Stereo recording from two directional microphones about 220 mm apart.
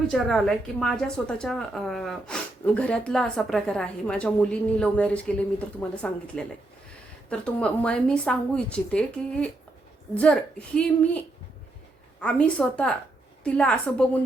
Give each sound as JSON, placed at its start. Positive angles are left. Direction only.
{"t": 0.1, "sound": "a woman's voice", "side_deg": 0}
{"t": 10.8, "sound": "a woman's voice", "side_deg": 5}
{"t": 12.2, "sound": "a woman's voice", "side_deg": 5}